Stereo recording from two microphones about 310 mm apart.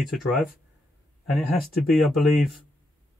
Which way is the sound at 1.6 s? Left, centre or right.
Centre.